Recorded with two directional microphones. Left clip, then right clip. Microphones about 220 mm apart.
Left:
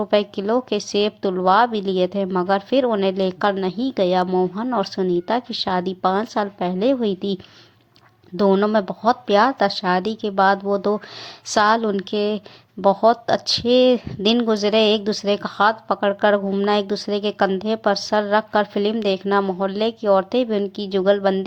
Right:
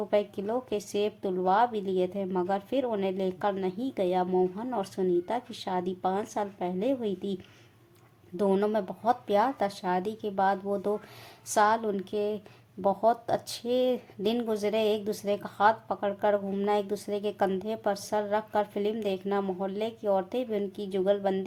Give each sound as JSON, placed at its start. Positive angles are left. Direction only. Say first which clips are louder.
{"t": 0.1, "sound": "a woman's voice", "louder": "left 9 dB", "side_deg": 15}
{"t": 8.4, "sound": "a woman's voice", "louder": "left 9 dB", "side_deg": 15}